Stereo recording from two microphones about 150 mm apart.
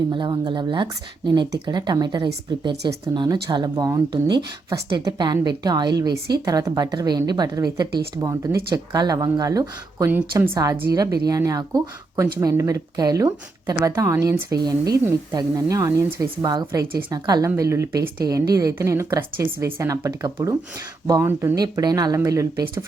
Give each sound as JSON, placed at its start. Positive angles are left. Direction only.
{"t": 0.1, "sound": "a woman's voice", "side_deg": -30}
{"t": 16.5, "sound": "speech", "side_deg": -30}